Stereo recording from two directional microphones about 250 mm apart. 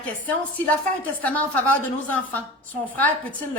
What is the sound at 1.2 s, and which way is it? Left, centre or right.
A woman's voice, centre.